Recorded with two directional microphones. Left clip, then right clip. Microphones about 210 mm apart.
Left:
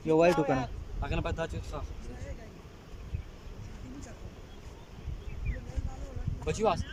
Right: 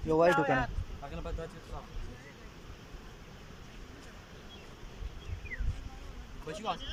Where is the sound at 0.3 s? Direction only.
15° left (ahead or behind).